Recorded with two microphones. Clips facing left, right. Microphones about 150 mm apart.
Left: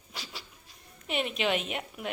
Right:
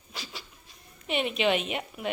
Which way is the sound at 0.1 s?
15° right (ahead or behind).